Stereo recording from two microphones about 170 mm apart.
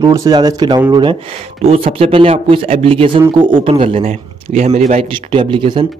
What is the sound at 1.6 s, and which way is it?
Speech, 35° right (ahead or behind).